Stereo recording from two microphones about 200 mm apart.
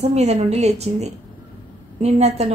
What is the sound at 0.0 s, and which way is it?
A woman's voice, 35° right (ahead or behind).